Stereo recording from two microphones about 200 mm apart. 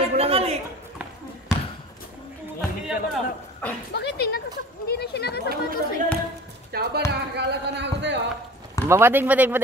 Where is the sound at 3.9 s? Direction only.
55° left (ahead or behind).